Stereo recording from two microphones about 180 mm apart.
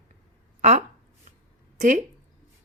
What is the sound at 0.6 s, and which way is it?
Speech, 40° right (ahead or behind).